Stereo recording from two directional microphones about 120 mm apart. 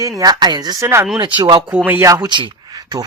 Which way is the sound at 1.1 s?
35° right (ahead or behind).